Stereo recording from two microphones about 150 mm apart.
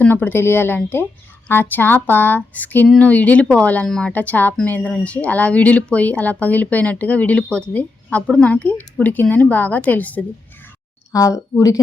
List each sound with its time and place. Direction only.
0.0 s speech: 10° left (ahead or behind)
11.1 s speech: 20° left (ahead or behind)